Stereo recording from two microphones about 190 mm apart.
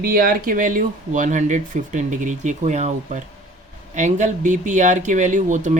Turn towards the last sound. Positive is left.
turn(degrees=-40)  # may be behind; listen again after turning